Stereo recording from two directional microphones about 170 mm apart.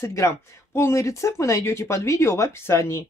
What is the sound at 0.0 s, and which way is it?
Speech, 15° left (ahead or behind).